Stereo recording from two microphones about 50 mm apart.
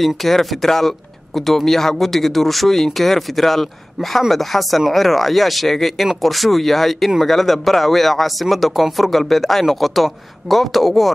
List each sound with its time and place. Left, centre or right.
0.0 s speech: centre